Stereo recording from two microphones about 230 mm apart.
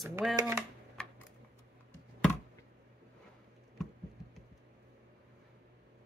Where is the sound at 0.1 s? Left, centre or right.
Centre.